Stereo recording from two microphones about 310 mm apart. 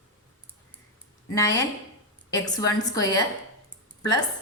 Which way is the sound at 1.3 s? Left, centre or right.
Centre.